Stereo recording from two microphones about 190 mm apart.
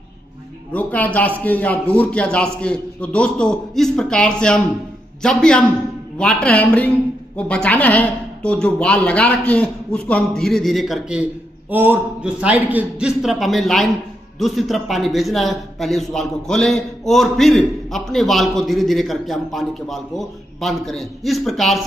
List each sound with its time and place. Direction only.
0.7 s a man's voice: 10° left (ahead or behind)